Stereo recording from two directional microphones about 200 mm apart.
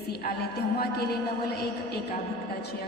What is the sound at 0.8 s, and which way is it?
Speech, 50° left (ahead or behind).